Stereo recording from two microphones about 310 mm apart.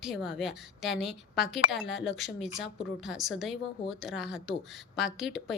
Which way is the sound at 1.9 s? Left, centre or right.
Left.